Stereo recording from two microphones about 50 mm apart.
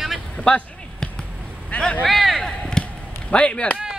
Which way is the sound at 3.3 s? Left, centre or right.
Left.